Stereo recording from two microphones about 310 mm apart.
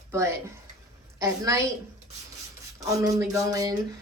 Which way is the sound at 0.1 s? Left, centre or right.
Centre.